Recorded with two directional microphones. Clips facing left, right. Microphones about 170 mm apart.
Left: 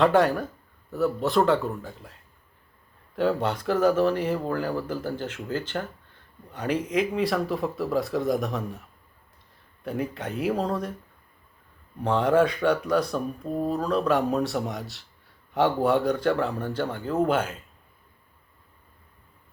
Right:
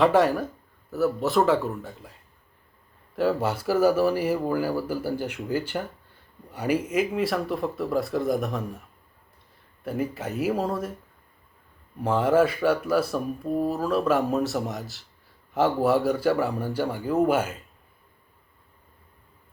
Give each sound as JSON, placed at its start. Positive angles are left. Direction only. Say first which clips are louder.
{"t": 0.0, "sound": "speech", "louder": "even", "side_deg": 0}
{"t": 3.2, "sound": "speech", "louder": "even", "side_deg": -5}
{"t": 9.8, "sound": "speech", "louder": "right 1 dB", "side_deg": -5}
{"t": 12.0, "sound": "speech", "louder": "even", "side_deg": -5}